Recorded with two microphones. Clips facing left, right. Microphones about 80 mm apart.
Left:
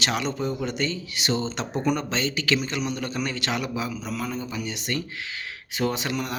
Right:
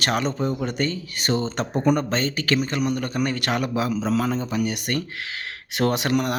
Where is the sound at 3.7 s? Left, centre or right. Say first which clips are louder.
Right 7 dB; right.